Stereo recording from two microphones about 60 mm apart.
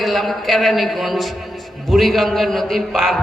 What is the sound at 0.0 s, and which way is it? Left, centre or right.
A man's voice, centre.